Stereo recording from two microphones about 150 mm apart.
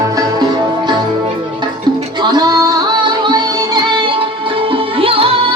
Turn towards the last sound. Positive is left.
turn(degrees=-40)  # may be behind; listen again after turning